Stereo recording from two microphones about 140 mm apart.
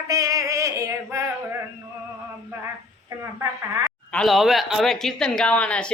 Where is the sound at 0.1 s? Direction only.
25° right (ahead or behind).